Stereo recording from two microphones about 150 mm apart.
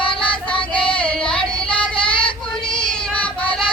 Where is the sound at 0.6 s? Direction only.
35° left (ahead or behind).